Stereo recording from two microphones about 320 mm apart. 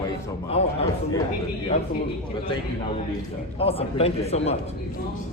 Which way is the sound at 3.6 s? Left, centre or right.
Centre.